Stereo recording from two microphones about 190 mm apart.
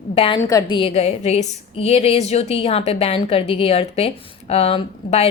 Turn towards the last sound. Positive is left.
turn(degrees=30)  # may be behind; listen again after turning